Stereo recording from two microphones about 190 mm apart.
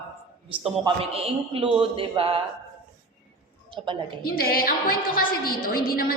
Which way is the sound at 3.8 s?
30° right (ahead or behind).